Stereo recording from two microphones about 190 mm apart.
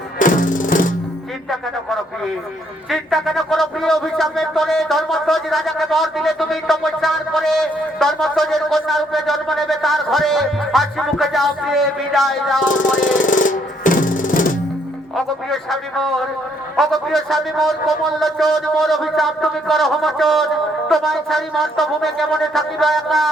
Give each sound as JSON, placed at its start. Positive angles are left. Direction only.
{"t": 0.2, "sound": "music", "side_deg": 45}
{"t": 1.5, "sound": "speech", "side_deg": 0}
{"t": 12.6, "sound": "music", "side_deg": 45}
{"t": 15.1, "sound": "speech", "side_deg": 0}